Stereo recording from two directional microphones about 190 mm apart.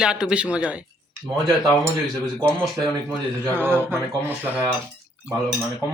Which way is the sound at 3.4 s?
10° right (ahead or behind).